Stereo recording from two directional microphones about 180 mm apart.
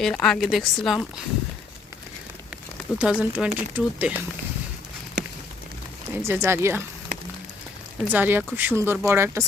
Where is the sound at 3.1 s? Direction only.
5° right (ahead or behind).